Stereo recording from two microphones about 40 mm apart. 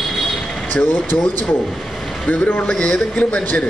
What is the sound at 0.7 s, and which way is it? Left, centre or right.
Speech, left.